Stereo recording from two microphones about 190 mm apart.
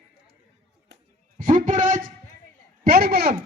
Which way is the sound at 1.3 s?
45° right (ahead or behind).